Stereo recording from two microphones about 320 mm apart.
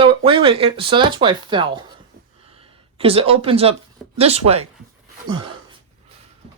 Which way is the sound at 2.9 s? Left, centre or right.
Centre.